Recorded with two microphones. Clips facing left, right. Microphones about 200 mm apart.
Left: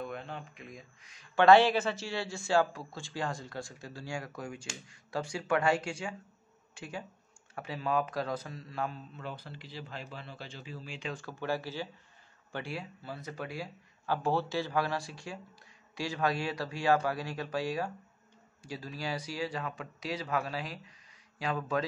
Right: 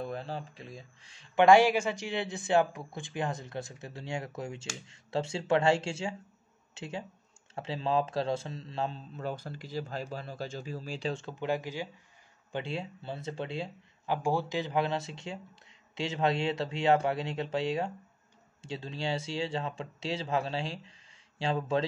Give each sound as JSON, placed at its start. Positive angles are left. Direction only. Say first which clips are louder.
{"t": 0.0, "sound": "a sound", "louder": "right 3 dB", "side_deg": -35}
{"t": 1.3, "sound": "a man's voice", "louder": "right 1 dB", "side_deg": -15}
{"t": 9.1, "sound": "a man's voice", "louder": "right 6 dB", "side_deg": -45}